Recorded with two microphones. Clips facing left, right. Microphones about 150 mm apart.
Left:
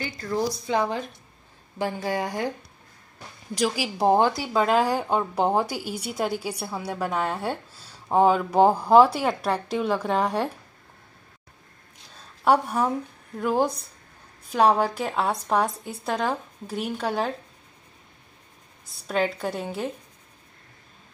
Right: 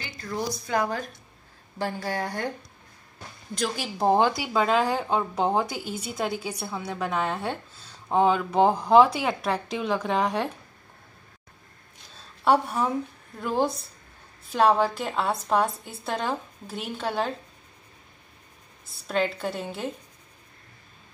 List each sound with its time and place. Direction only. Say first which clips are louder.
0.0 s a sound: left 6 dB; 35° left (ahead or behind)
0.7 s a woman's voice: left 2 dB; 20° left (ahead or behind)
3.5 s a woman's voice: left 4 dB; 5° left (ahead or behind)
12.4 s a woman's voice: left 1 dB; 10° left (ahead or behind)
19.0 s speech: left 1 dB; 5° left (ahead or behind)